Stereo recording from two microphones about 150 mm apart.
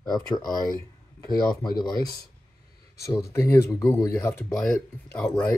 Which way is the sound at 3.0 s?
20° left (ahead or behind).